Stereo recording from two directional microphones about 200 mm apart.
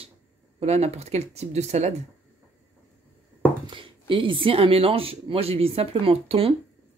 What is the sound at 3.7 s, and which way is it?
Speech, 25° right (ahead or behind).